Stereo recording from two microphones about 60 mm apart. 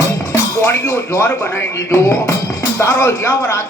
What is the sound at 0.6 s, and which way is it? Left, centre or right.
Speech, left.